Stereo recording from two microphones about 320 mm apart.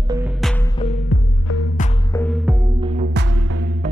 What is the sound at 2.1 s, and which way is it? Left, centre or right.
Music, centre.